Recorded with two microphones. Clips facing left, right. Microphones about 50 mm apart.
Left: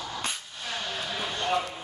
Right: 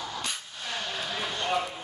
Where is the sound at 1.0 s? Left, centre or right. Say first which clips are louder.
Left 1 dB; centre.